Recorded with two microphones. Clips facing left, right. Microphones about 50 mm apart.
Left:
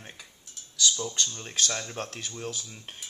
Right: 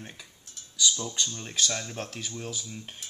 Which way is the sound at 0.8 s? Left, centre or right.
Centre.